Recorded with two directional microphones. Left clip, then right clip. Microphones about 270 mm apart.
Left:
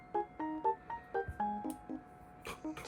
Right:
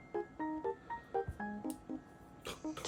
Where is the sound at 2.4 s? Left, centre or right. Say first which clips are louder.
Even; centre.